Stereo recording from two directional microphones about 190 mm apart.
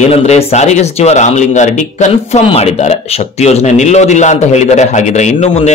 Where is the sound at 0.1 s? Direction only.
35° left (ahead or behind).